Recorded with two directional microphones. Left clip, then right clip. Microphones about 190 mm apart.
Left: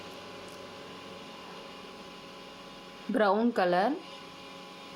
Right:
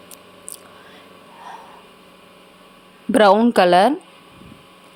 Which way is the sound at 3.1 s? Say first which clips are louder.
Right 13 dB; 50° right (ahead or behind).